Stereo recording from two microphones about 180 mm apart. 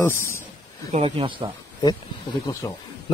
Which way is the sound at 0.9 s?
30° right (ahead or behind).